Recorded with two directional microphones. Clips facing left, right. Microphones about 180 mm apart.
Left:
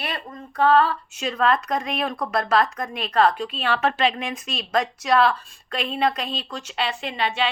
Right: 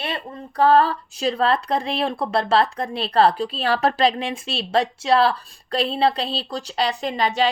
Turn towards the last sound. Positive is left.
turn(degrees=-40)  # may be behind; listen again after turning